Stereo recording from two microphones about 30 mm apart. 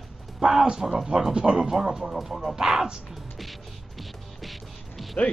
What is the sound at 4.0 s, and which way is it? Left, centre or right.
Music, centre.